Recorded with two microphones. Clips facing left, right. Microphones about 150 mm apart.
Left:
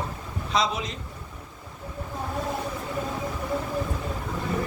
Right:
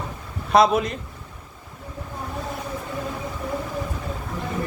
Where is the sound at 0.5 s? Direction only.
55° right (ahead or behind).